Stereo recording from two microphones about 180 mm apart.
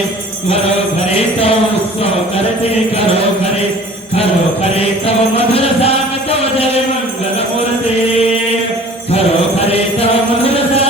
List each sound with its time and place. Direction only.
1.1 s jingle bell: 35° left (ahead or behind)
4.2 s jingle bell: 35° left (ahead or behind)
9.1 s music: 35° left (ahead or behind)